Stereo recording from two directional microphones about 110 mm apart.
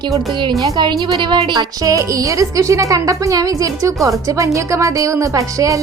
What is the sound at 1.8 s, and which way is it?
A woman's voice, 30° right (ahead or behind).